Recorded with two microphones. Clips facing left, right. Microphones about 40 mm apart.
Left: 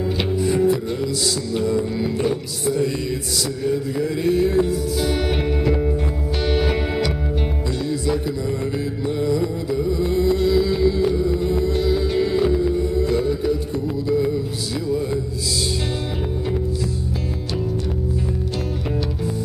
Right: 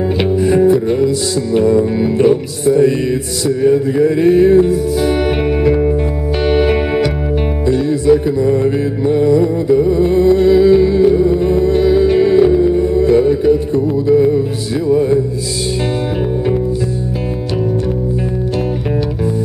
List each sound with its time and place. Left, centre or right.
0.2 s music: right